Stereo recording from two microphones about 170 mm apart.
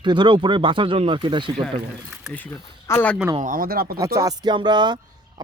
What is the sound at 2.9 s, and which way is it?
Speech, 10° left (ahead or behind).